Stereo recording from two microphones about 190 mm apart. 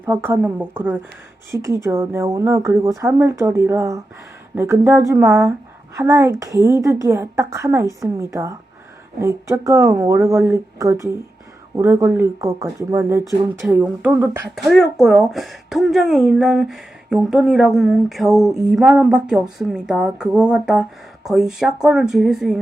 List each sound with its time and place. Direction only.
0.0 s speech: 10° right (ahead or behind)
13.6 s speech: 5° right (ahead or behind)
14.5 s a woman's voice: centre (ahead or behind)